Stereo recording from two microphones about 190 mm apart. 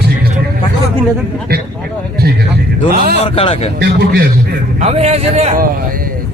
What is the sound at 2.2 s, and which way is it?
Speech, 55° right (ahead or behind).